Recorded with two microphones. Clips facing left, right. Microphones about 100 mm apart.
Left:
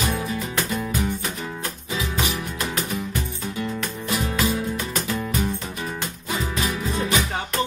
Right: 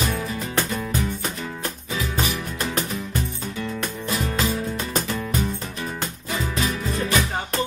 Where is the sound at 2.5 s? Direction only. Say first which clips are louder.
Even; 35° right (ahead or behind).